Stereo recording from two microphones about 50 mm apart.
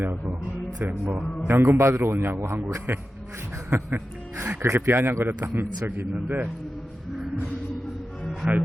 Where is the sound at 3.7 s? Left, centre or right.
Right.